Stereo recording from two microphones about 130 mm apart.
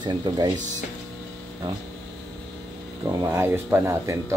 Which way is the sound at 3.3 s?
20° right (ahead or behind).